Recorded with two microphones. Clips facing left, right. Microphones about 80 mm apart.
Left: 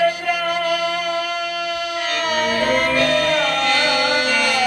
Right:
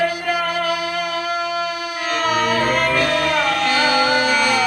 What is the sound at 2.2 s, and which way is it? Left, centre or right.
Music, right.